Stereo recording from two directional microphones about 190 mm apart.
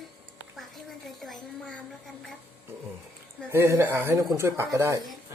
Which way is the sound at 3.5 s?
15° right (ahead or behind).